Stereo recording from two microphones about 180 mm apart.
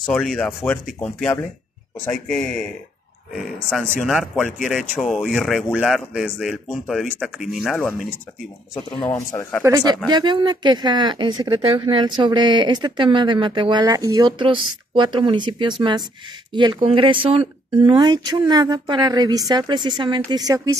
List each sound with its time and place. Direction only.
0.0 s speech: centre (ahead or behind)
4.0 s speech: centre (ahead or behind)
9.1 s speech: 10° left (ahead or behind)
9.6 s speech: 20° right (ahead or behind)